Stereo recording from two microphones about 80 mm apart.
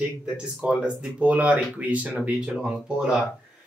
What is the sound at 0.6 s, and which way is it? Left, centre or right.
Speech, centre.